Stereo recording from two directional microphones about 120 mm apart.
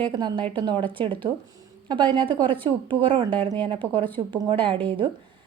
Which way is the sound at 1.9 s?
40° right (ahead or behind).